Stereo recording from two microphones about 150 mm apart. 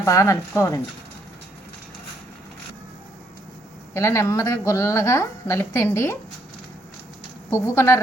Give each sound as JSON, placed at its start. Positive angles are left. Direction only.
{"t": 0.0, "sound": "a woman's voice", "side_deg": 20}
{"t": 3.9, "sound": "a woman's voice", "side_deg": 20}
{"t": 7.5, "sound": "a woman's voice", "side_deg": 20}